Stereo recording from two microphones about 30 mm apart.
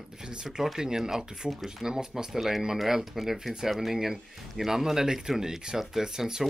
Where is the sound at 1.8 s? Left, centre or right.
Centre.